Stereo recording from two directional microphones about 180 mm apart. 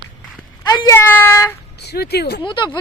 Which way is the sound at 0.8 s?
15° left (ahead or behind).